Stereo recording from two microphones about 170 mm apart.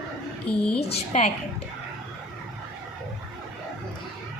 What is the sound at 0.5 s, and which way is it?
Speech, 5° left (ahead or behind).